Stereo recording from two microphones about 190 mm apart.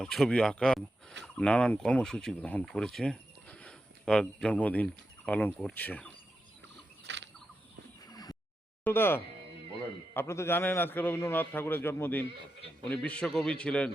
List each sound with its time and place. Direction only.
0.0 s a man's voice: centre (ahead or behind)
7.1 s a sound: 70° right (ahead or behind)
8.0 s neigh: 20° left (ahead or behind)
8.8 s a man's voice: 10° left (ahead or behind)